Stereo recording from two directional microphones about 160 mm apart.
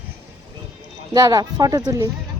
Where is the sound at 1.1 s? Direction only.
20° right (ahead or behind).